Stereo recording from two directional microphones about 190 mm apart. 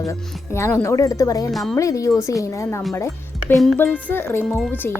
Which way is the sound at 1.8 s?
15° left (ahead or behind).